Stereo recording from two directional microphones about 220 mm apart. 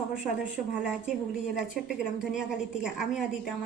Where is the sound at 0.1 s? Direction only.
5° right (ahead or behind).